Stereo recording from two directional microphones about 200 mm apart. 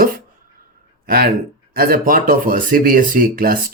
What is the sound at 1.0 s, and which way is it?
A man's voice, 45° right (ahead or behind).